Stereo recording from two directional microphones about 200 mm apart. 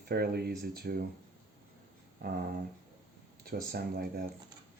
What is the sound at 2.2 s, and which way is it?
Dog, 50° right (ahead or behind).